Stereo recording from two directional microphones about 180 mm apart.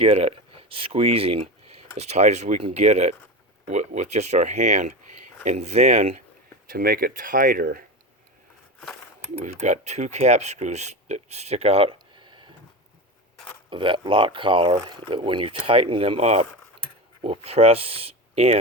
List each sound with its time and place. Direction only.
0.0 s speech: 35° right (ahead or behind)
6.7 s speech: 55° right (ahead or behind)
9.4 s speech: 40° right (ahead or behind)
13.7 s speech: 25° right (ahead or behind)